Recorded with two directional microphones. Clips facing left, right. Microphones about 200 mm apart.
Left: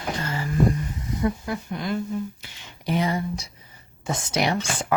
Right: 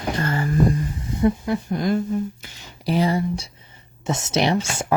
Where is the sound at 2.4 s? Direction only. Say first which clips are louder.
Right 3 dB; 35° right (ahead or behind).